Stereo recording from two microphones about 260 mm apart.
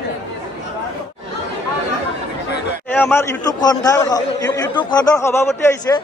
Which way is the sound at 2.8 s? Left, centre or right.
Centre.